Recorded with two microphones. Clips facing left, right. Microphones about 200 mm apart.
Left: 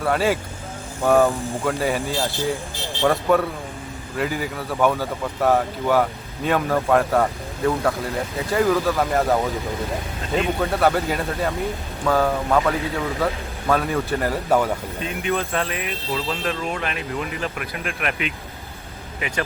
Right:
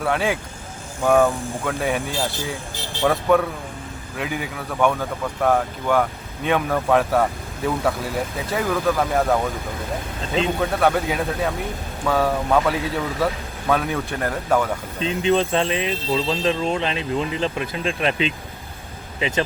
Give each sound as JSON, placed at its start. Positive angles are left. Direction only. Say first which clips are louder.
{"t": 0.0, "sound": "speech", "louder": "left 2 dB", "side_deg": 0}
{"t": 10.6, "sound": "speech", "louder": "even", "side_deg": 0}
{"t": 15.0, "sound": "speech", "louder": "right 7 dB", "side_deg": -25}